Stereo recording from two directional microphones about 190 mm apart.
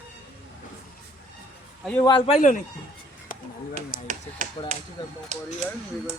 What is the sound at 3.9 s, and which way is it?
Finger snapping, 45° left (ahead or behind).